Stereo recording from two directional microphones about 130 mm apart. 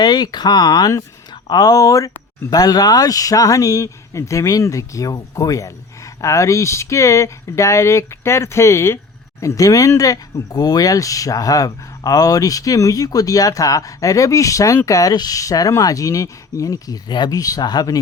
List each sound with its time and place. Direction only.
0.0 s speech: 30° left (ahead or behind)